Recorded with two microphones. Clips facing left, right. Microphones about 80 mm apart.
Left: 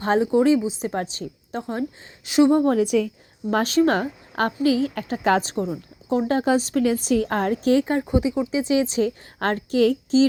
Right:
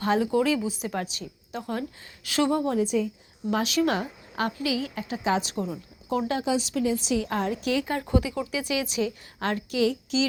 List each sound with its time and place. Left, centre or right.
0.0 s a woman's voice: left
2.2 s speech: left
2.6 s a woman's voice: left
3.5 s a woman's voice: left
5.5 s a woman's voice: left
8.0 s a woman's voice: left